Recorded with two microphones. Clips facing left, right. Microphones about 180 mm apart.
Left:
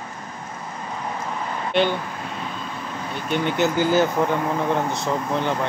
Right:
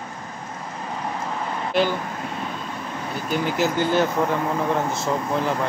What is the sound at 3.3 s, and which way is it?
Speech, centre (ahead or behind).